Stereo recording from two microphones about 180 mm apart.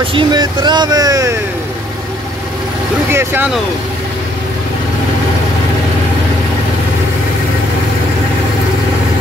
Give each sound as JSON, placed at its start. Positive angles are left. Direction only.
{"t": 0.0, "sound": "speech", "side_deg": -25}
{"t": 3.1, "sound": "speech", "side_deg": -15}